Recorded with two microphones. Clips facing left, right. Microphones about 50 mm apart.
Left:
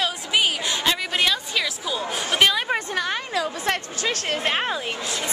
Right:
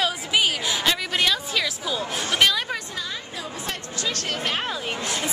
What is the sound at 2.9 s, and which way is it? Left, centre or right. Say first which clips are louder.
Speech: left 7 dB; left.